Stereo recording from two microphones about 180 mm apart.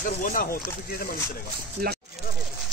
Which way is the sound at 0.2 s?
50° left (ahead or behind).